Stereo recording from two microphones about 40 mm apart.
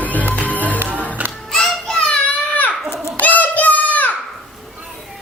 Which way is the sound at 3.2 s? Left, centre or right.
Left.